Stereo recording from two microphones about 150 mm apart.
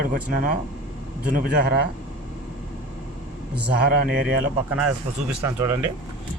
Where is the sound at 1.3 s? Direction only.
90° right.